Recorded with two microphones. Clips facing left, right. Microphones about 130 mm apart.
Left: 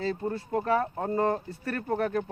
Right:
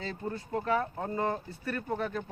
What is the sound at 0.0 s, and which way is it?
Speech, 35° left (ahead or behind).